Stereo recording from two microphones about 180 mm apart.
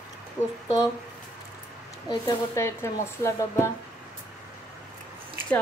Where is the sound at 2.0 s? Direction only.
20° left (ahead or behind).